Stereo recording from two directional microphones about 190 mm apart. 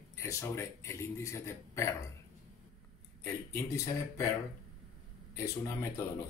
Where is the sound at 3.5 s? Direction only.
15° left (ahead or behind).